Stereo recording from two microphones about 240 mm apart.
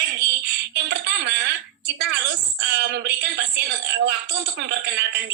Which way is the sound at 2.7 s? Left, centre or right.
Right.